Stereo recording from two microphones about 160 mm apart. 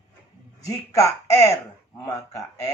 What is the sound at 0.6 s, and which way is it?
Speech, 20° left (ahead or behind).